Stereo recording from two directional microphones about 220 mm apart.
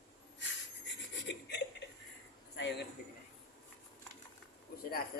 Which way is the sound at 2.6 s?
55° left (ahead or behind).